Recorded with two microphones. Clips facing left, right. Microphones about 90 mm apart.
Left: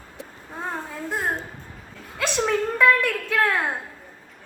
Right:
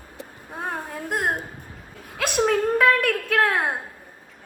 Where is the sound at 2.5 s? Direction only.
50° right (ahead or behind).